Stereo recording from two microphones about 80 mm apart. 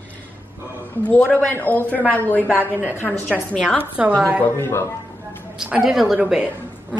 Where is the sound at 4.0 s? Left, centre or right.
Centre.